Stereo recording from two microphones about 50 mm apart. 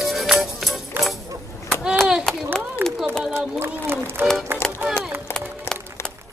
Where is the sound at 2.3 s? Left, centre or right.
Centre.